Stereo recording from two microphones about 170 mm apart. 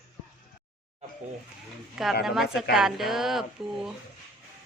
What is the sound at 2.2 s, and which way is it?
Speech, centre (ahead or behind).